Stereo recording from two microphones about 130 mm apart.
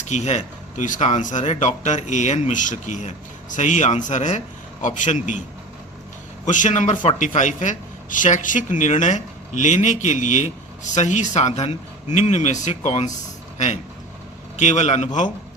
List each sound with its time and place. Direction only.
0.1 s a man's voice: 60° left (ahead or behind)
6.4 s a man's voice: 75° left (ahead or behind)
14.5 s speech: 65° left (ahead or behind)